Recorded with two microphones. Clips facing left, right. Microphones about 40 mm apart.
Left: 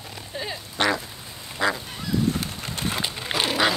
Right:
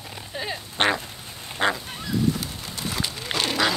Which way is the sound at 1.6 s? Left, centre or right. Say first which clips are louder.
Right 1 dB; right.